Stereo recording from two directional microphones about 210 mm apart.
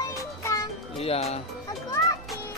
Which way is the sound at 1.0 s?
30° left (ahead or behind).